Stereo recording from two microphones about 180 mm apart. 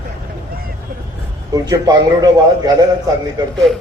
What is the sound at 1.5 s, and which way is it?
A man's voice, 20° right (ahead or behind).